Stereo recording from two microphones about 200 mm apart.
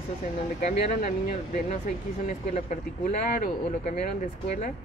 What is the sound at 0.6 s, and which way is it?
Speech, 35° left (ahead or behind).